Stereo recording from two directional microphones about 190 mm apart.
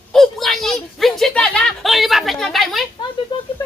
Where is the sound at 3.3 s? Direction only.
25° left (ahead or behind).